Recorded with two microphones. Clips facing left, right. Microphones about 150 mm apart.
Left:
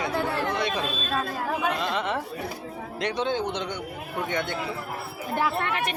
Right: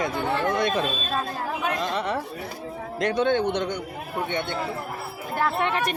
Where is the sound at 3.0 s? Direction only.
55° right (ahead or behind).